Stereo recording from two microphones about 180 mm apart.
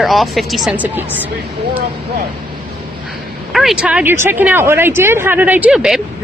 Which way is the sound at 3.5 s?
5° right (ahead or behind).